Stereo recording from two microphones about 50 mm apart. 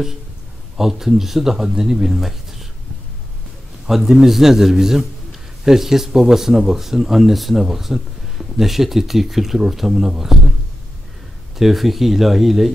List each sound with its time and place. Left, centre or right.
0.7 s speech: centre
3.9 s speech: centre
11.5 s speech: centre